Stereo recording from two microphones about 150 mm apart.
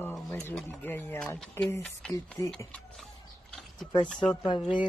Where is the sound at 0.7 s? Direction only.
15° left (ahead or behind).